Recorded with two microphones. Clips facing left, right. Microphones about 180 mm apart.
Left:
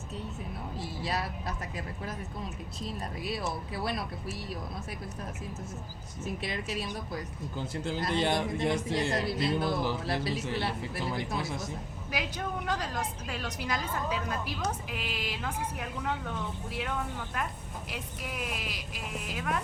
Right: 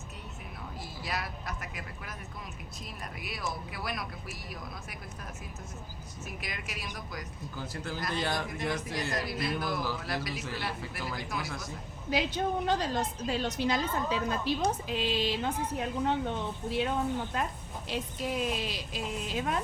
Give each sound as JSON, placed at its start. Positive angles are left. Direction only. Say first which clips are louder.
{"t": 0.8, "sound": "speech", "louder": "left 3 dB", "side_deg": 30}
{"t": 6.2, "sound": "speech", "louder": "left 7 dB", "side_deg": 30}
{"t": 12.1, "sound": "a woman's voice", "louder": "right 5 dB", "side_deg": -25}